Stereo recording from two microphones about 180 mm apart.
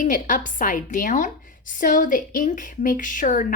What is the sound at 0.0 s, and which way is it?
Speech, 45° left (ahead or behind).